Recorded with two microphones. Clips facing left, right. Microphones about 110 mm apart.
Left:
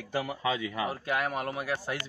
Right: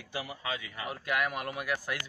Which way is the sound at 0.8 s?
30° left (ahead or behind).